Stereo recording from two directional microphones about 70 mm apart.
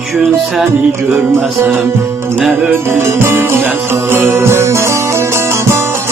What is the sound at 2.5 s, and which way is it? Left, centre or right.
Music, right.